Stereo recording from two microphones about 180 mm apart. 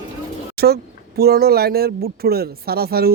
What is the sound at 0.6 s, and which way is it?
A woman's voice, 60° right (ahead or behind).